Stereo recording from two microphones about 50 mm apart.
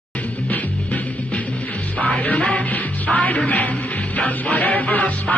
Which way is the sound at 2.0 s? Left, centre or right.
Left.